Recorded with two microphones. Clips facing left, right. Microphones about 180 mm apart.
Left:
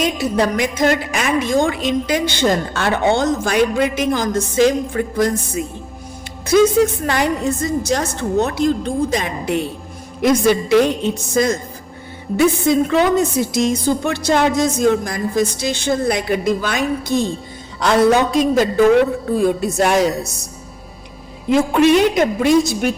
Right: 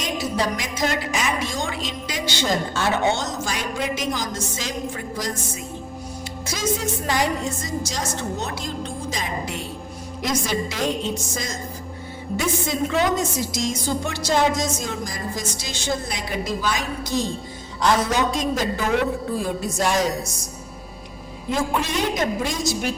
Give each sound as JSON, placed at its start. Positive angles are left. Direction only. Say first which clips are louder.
{"t": 0.3, "sound": "a woman's voice", "louder": "left 8 dB", "side_deg": 55}
{"t": 6.5, "sound": "a woman's voice", "louder": "left 13 dB", "side_deg": 60}
{"t": 21.5, "sound": "a woman's voice", "louder": "left 11 dB", "side_deg": 70}